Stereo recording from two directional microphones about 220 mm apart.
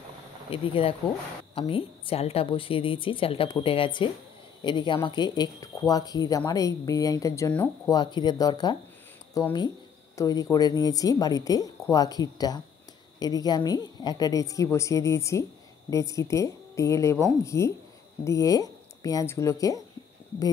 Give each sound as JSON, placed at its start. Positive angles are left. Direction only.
{"t": 0.5, "sound": "a woman's voice", "side_deg": 25}